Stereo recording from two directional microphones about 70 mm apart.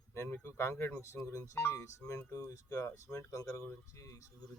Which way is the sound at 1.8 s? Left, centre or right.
Left.